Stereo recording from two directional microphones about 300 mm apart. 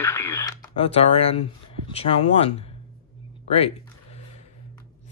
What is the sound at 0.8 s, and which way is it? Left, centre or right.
Speech, centre.